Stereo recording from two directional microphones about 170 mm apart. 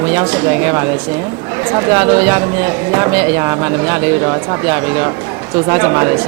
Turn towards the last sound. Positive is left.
turn(degrees=-15)  # may be behind; listen again after turning